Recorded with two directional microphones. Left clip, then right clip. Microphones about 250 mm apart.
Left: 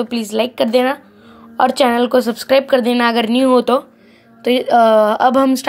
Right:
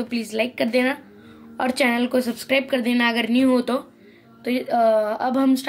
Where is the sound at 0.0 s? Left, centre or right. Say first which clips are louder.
Left 7 dB; centre.